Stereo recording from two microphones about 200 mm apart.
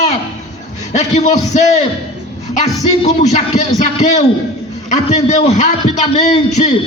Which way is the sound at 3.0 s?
35° left (ahead or behind).